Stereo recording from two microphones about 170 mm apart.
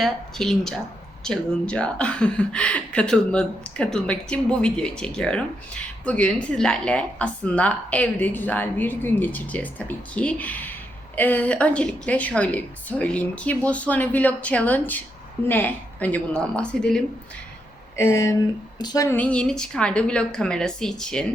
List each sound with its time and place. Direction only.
0.0 s a woman's voice: centre (ahead or behind)
17.9 s speech: 15° left (ahead or behind)